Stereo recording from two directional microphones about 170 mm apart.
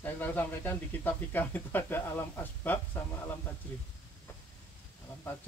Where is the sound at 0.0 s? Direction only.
10° left (ahead or behind).